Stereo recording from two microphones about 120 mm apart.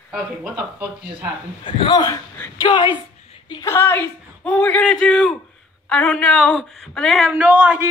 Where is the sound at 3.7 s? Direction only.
15° left (ahead or behind).